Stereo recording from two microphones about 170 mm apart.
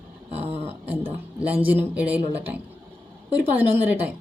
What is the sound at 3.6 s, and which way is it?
Speech, 10° right (ahead or behind).